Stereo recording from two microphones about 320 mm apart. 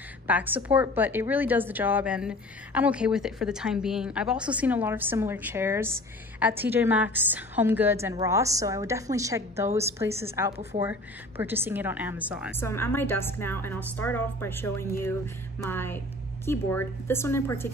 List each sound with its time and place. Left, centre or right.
0.3 s a woman's voice: centre
12.5 s a woman's voice: centre